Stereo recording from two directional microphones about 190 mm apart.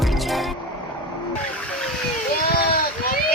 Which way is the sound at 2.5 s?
50° left (ahead or behind).